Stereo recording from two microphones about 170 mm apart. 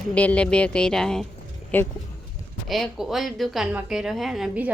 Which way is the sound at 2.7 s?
Centre (ahead or behind).